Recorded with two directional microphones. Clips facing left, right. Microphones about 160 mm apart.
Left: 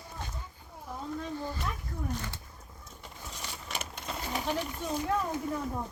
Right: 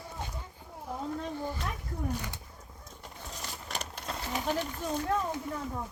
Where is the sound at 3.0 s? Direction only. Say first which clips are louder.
Right 1 dB; centre (ahead or behind).